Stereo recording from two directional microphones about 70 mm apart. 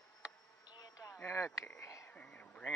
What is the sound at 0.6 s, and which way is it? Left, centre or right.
Insect, left.